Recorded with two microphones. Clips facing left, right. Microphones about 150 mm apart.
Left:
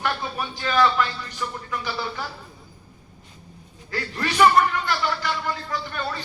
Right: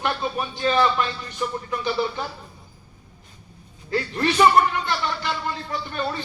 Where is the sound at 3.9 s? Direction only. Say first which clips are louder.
Right 4 dB; 25° right (ahead or behind).